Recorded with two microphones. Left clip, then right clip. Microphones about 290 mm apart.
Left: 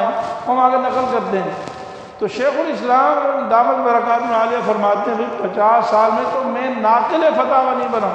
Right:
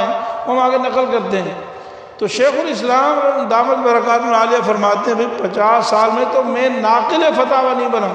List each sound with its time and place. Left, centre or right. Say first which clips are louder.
0.5 s a man's voice: even; right
2.4 s a man's voice: right 3 dB; right